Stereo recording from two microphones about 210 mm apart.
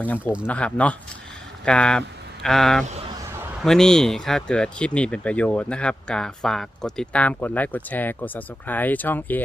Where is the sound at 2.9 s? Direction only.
30° right (ahead or behind).